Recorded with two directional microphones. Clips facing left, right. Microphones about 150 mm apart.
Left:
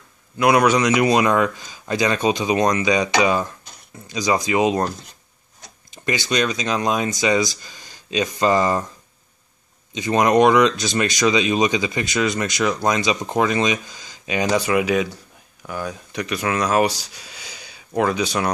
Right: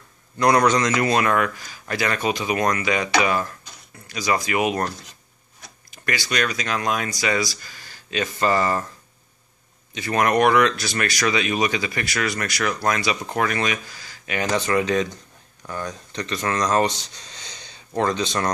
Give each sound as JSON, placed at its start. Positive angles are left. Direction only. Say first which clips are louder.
{"t": 0.4, "sound": "speech", "louder": "left 2 dB", "side_deg": 10}
{"t": 9.9, "sound": "speech", "louder": "left 4 dB", "side_deg": 20}